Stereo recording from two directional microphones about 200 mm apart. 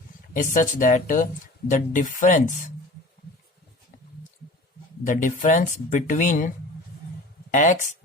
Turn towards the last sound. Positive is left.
turn(degrees=40)  # may be behind; listen again after turning